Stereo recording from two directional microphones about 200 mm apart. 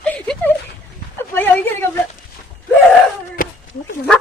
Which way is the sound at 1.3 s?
10° left (ahead or behind).